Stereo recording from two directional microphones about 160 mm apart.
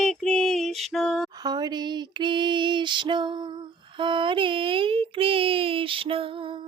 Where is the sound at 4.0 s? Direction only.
30° right (ahead or behind).